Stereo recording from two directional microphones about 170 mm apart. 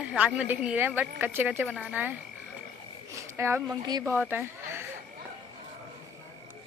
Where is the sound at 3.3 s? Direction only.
15° right (ahead or behind).